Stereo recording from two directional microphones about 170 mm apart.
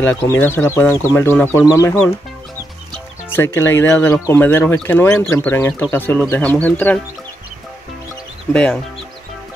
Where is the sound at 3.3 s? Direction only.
15° left (ahead or behind).